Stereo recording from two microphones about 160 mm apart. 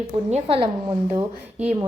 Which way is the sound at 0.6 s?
25° right (ahead or behind).